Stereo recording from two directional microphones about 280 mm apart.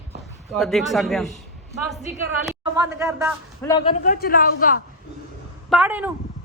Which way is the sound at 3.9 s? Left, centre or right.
Left.